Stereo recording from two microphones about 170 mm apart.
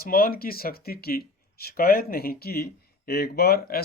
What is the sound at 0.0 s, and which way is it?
Speech, 60° left (ahead or behind).